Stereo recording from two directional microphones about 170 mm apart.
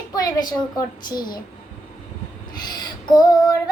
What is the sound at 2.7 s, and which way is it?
Female singing, 25° left (ahead or behind).